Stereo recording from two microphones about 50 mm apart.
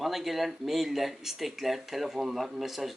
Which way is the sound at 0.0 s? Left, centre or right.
Centre.